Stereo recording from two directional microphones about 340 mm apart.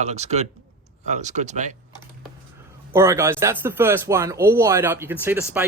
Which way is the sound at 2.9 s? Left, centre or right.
Centre.